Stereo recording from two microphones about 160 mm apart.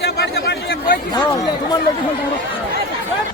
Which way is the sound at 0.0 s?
90° left.